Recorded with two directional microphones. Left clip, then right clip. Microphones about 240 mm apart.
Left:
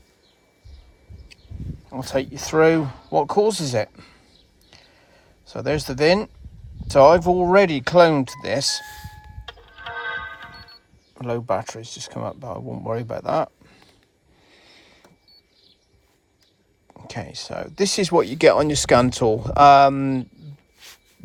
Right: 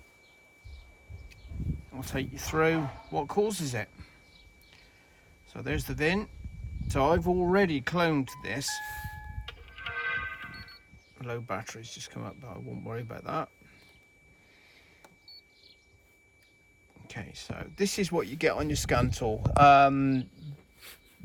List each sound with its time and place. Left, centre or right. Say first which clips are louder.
1.9 s speech: left 13 dB; centre
5.5 s speech: left 11 dB; centre
9.5 s music: left 5 dB; centre
11.1 s speech: left 12 dB; centre
17.1 s speech: left 11 dB; centre